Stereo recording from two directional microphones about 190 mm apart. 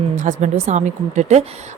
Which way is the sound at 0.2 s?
40° right (ahead or behind).